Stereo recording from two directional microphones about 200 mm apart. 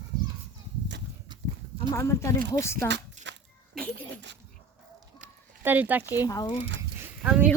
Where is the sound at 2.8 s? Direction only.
60° right (ahead or behind).